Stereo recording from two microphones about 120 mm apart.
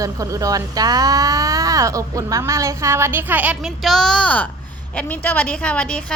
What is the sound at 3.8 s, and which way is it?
A woman's voice, 5° left (ahead or behind).